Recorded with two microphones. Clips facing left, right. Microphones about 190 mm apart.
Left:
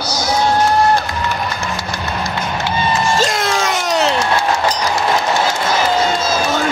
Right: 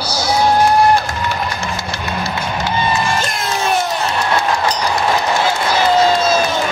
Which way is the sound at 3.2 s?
90° left.